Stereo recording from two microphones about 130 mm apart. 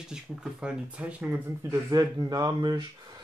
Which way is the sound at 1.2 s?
20° right (ahead or behind).